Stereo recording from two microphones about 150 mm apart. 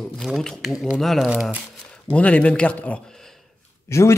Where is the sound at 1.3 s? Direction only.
10° right (ahead or behind).